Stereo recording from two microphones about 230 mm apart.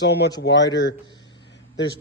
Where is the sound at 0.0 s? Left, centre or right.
Left.